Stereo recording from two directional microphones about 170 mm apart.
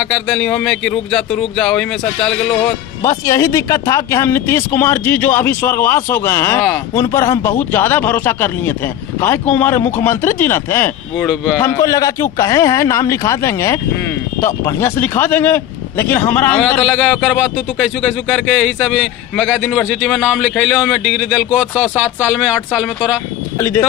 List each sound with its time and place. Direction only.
0.0 s speech: 5° left (ahead or behind)
3.0 s a man's voice: 15° left (ahead or behind); by 22.9 s 5° right (ahead or behind)
23.6 s a man's voice: 15° left (ahead or behind)